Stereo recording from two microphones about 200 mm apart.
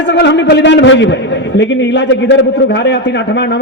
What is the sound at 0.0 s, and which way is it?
A man's voice, 60° left (ahead or behind).